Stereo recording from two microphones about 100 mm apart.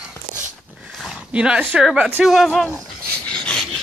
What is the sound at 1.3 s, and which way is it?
A woman's voice, 10° right (ahead or behind).